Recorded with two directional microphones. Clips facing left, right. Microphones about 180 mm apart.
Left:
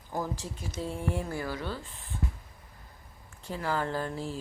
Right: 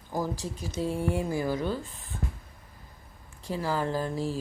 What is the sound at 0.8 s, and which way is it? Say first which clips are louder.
Speech: right 5 dB; 10° right (ahead or behind).